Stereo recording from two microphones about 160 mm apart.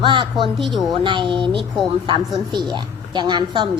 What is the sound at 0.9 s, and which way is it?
A woman's voice, 30° right (ahead or behind).